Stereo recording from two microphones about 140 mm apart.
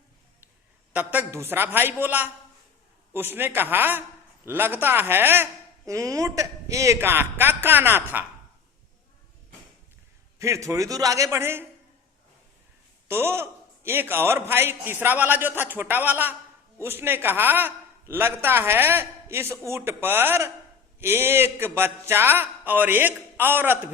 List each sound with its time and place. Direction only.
0.9 s speech: 15° right (ahead or behind)
10.3 s a man's voice: 20° right (ahead or behind)
13.1 s a man's voice: 15° right (ahead or behind)